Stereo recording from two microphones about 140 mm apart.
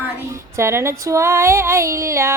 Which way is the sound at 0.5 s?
20° right (ahead or behind).